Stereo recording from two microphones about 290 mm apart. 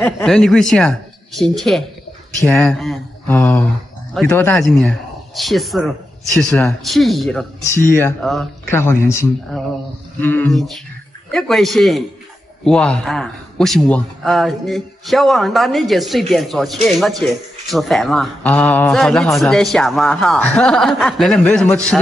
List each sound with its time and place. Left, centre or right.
0.0 s a man's voice: centre